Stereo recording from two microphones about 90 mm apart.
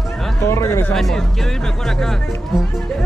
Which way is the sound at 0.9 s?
5° left (ahead or behind).